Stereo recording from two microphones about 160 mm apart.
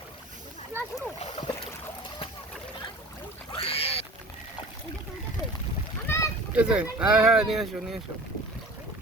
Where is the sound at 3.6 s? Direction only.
35° left (ahead or behind).